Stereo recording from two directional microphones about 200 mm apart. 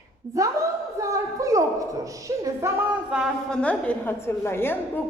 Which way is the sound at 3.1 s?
5° right (ahead or behind).